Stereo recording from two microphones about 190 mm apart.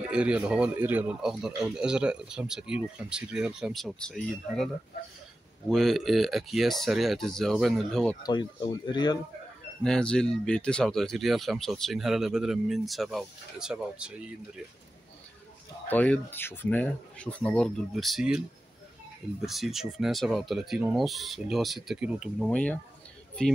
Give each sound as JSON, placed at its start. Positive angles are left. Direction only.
{"t": 0.1, "sound": "speech", "side_deg": -5}
{"t": 5.7, "sound": "speech", "side_deg": 0}
{"t": 8.2, "sound": "speech", "side_deg": 25}
{"t": 9.8, "sound": "speech", "side_deg": 5}
{"t": 15.9, "sound": "speech", "side_deg": 10}
{"t": 19.4, "sound": "speech", "side_deg": 0}